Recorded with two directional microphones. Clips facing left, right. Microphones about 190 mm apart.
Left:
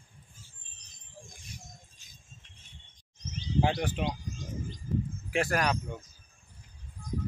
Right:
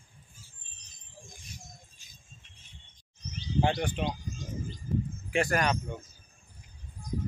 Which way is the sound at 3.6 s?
5° left (ahead or behind).